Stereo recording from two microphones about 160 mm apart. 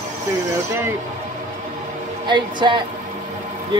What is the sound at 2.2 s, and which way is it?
Speech, 25° right (ahead or behind).